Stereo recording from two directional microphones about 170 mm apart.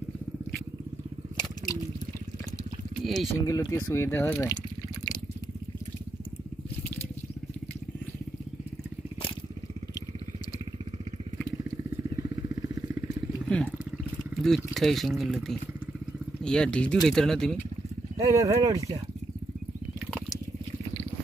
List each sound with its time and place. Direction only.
3.0 s a sound: centre (ahead or behind)
3.4 s speech: 15° left (ahead or behind)
12.2 s vehicle: 20° right (ahead or behind)
14.4 s speech: centre (ahead or behind)
18.1 s speech: 20° right (ahead or behind)